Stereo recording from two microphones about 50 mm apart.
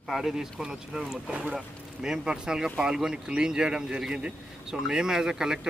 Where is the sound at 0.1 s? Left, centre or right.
Centre.